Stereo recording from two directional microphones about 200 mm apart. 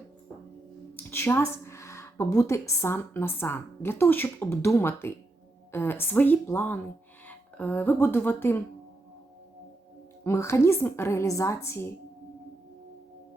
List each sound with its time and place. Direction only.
0.9 s a woman's voice: 10° left (ahead or behind)
10.2 s a woman's voice: 15° left (ahead or behind)